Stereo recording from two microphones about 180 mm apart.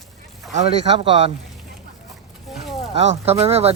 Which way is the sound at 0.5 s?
30° right (ahead or behind).